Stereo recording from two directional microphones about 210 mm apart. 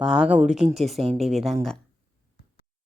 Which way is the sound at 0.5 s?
30° right (ahead or behind).